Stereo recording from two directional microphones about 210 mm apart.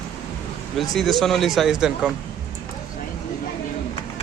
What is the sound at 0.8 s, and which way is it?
Speech, centre (ahead or behind).